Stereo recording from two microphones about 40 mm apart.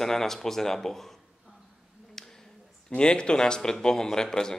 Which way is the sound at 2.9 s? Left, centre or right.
Left.